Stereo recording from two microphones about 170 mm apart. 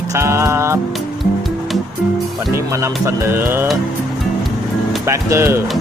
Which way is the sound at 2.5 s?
15° right (ahead or behind).